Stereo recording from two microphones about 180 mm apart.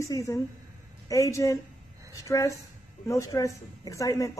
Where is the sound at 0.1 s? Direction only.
15° left (ahead or behind).